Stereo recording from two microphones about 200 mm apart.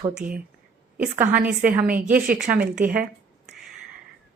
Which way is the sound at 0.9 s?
10° right (ahead or behind).